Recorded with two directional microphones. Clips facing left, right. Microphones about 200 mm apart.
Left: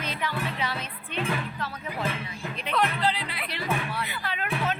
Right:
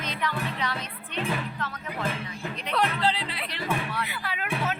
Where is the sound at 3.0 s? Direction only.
30° right (ahead or behind).